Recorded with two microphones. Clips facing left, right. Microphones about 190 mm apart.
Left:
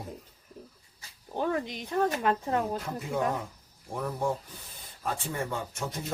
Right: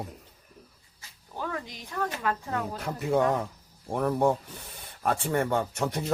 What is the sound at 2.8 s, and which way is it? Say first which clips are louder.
Speech: right 5 dB; 70° right (ahead or behind).